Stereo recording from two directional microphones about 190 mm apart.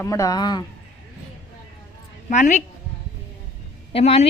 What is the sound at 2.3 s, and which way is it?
Speech, 40° left (ahead or behind).